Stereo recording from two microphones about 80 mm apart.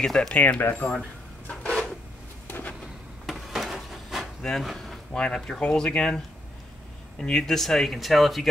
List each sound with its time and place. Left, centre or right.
0.0 s speech: centre
0.4 s speech: left
3.3 s vehicle: centre
4.5 s speech: centre